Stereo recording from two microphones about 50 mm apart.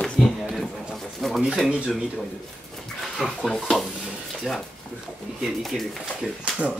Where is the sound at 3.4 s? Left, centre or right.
Centre.